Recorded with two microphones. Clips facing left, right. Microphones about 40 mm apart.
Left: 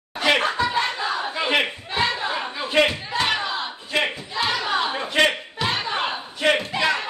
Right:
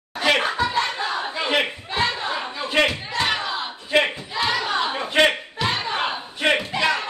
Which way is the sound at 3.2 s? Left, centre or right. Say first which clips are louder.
Even; centre.